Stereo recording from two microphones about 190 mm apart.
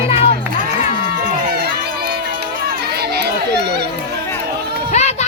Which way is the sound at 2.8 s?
55° right (ahead or behind).